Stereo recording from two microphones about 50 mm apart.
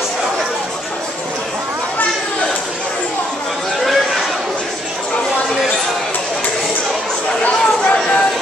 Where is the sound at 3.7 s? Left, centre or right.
Centre.